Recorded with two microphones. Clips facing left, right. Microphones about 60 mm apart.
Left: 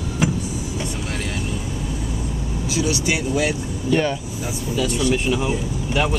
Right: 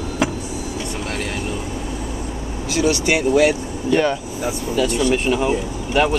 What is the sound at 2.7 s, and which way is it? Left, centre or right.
Speech, right.